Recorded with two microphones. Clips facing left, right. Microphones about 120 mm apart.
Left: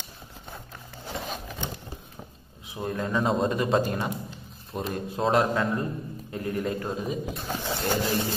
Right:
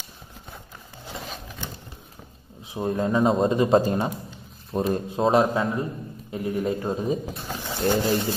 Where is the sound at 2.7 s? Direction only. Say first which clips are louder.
Right 5 dB; 25° right (ahead or behind).